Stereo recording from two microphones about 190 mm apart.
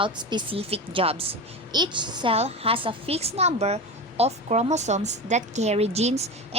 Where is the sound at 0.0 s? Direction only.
25° right (ahead or behind).